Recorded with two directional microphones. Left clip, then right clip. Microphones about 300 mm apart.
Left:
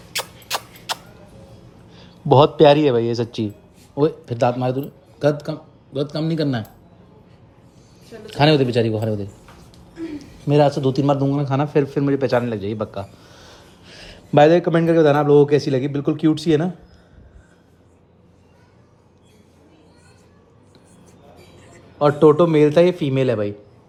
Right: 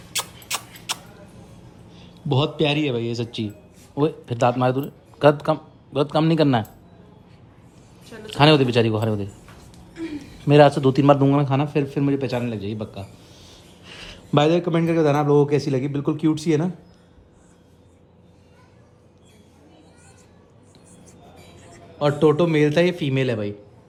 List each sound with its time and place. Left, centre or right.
0.1 s a sound: centre
2.3 s a man's voice: centre
8.1 s a man's voice: centre
10.4 s speech: right
11.3 s a man's voice: centre
21.6 s a man's voice: centre